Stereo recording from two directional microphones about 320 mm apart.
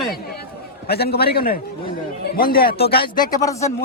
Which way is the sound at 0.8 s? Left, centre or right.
Left.